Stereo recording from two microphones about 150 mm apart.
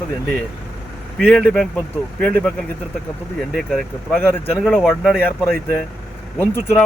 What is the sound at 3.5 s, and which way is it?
Speech, 5° left (ahead or behind).